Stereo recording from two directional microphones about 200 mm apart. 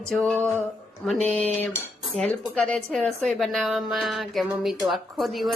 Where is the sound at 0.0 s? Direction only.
5° left (ahead or behind).